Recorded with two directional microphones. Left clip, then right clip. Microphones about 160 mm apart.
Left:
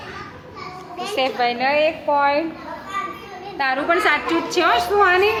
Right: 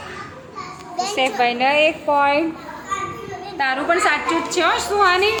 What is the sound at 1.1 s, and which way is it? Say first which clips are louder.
Speech: right 1 dB; 5° right (ahead or behind).